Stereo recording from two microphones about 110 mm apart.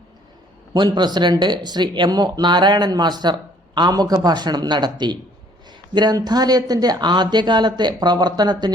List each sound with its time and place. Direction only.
0.7 s speech: 40° right (ahead or behind)